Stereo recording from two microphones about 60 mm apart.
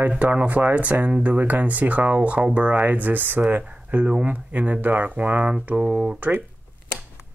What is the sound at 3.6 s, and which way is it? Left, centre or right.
Speech, centre.